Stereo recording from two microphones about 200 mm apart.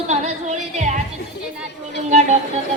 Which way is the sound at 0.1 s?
35° right (ahead or behind).